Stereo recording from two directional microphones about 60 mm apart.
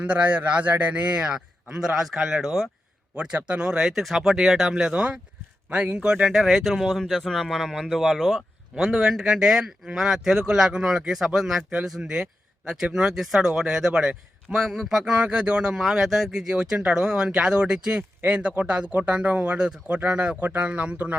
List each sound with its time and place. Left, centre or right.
0.0 s a man's voice: right; by 2.6 s centre
3.3 s a man's voice: centre
6.1 s speech: centre
8.8 s speech: centre
15.8 s a man's voice: centre; by 21.2 s right